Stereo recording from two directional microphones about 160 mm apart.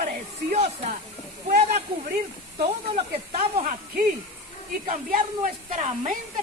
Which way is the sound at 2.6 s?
40° right (ahead or behind).